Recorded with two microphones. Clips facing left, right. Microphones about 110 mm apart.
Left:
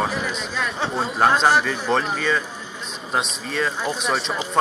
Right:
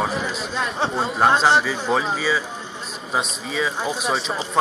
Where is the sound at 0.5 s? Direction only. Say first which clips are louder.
Right 3 dB; 30° right (ahead or behind).